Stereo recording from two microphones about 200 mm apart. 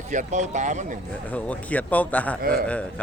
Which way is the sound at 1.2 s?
5° left (ahead or behind).